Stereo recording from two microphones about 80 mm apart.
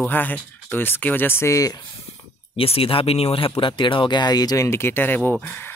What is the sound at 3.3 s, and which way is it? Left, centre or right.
Speech, left.